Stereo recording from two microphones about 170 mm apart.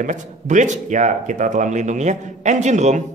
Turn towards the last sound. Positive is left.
turn(degrees=-45)  # may be behind; listen again after turning